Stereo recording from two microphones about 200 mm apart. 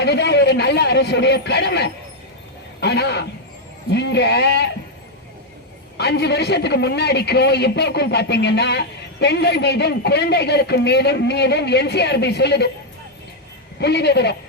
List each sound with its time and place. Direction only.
0.0 s a man's voice: 55° left (ahead or behind)
6.0 s a man's voice: 55° left (ahead or behind)
13.7 s a man's voice: 55° left (ahead or behind)